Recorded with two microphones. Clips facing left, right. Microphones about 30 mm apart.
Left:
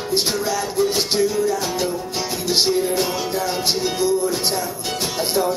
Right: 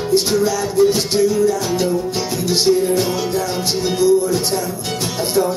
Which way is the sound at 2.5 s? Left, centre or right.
Centre.